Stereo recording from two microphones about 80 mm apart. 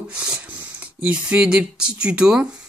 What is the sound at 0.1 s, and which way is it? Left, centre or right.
Speech, centre.